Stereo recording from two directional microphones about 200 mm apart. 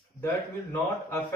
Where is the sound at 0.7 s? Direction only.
10° left (ahead or behind).